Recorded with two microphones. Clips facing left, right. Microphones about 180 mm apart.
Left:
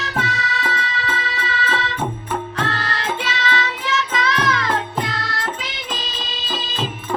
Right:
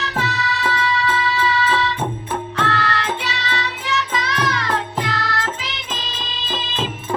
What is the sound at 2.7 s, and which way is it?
Music, 65° right (ahead or behind).